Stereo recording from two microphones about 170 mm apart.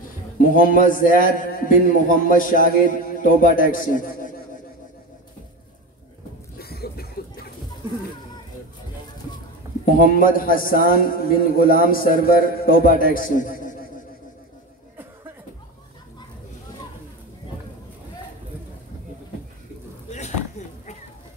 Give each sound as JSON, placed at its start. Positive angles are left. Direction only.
{"t": 0.4, "sound": "a man's voice", "side_deg": 50}
{"t": 6.6, "sound": "a sound", "side_deg": 65}
{"t": 9.9, "sound": "a man's voice", "side_deg": 55}
{"t": 20.1, "sound": "chop", "side_deg": 45}